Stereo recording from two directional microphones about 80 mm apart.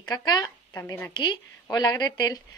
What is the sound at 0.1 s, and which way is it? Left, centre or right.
Speech, left.